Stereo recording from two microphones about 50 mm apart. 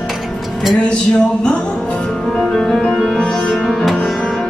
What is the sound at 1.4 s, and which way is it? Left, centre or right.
Music, left.